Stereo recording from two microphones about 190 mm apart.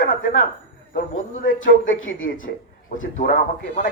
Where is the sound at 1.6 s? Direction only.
90° left.